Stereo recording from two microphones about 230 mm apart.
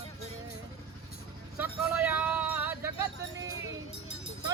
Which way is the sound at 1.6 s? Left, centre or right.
Centre.